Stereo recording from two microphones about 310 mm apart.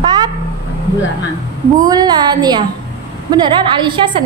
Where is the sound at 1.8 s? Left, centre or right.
Centre.